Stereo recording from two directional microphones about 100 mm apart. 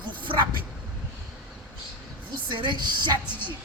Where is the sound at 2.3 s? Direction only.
50° right (ahead or behind).